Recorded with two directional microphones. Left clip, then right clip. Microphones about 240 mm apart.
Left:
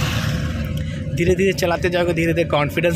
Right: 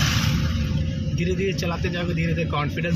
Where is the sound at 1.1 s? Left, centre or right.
Left.